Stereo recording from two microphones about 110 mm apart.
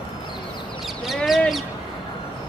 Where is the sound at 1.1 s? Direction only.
Centre (ahead or behind).